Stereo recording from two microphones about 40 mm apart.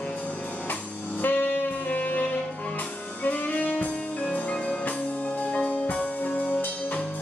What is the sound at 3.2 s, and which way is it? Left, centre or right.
Music, left.